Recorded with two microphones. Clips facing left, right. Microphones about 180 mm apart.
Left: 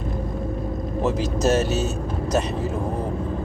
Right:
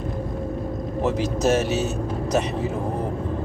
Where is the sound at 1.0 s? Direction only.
15° right (ahead or behind).